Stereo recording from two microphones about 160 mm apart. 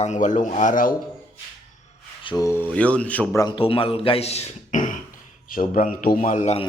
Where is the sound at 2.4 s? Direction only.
15° left (ahead or behind).